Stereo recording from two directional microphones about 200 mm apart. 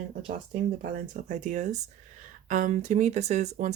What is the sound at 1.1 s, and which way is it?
Speech, 35° right (ahead or behind).